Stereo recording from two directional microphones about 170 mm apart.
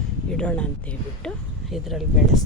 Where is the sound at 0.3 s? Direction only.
5° left (ahead or behind).